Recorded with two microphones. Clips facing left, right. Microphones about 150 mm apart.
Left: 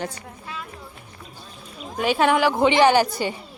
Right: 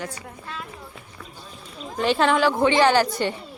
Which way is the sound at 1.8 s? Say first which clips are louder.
Left 1 dB; 5° left (ahead or behind).